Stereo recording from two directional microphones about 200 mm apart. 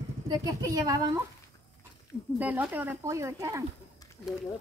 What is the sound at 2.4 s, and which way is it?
Speech, 10° right (ahead or behind).